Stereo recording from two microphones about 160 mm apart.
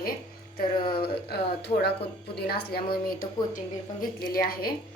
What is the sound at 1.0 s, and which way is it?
Speech, 85° left.